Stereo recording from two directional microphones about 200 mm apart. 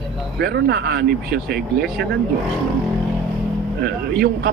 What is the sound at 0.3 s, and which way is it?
A man's voice, 55° right (ahead or behind).